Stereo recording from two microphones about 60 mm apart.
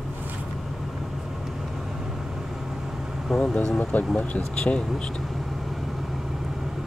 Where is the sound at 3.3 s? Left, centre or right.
Centre.